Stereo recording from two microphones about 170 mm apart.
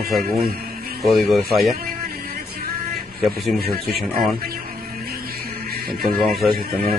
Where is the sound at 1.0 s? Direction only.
Centre (ahead or behind).